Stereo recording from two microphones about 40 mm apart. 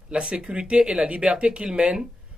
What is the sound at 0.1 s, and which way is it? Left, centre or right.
A man's voice, right.